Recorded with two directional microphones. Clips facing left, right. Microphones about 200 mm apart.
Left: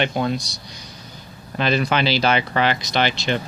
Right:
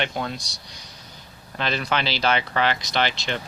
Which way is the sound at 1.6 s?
10° left (ahead or behind).